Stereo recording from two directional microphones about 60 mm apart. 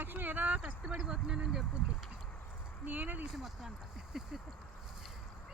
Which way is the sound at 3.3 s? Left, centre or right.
Centre.